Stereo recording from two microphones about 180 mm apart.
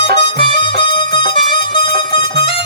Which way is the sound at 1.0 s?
25° left (ahead or behind).